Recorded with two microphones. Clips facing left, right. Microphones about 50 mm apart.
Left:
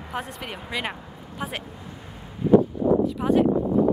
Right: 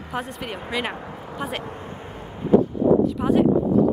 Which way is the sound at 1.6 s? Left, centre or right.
Right.